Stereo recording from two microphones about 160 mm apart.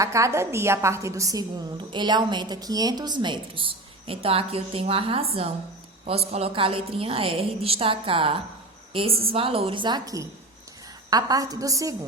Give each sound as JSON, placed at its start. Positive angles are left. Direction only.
{"t": 0.0, "sound": "a woman's voice", "side_deg": -20}